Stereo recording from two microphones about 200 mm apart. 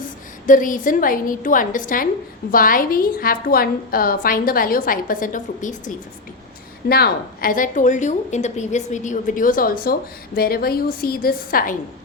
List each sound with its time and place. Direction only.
0.4 s a woman's voice: 40° left (ahead or behind)
6.8 s a woman's voice: 50° left (ahead or behind)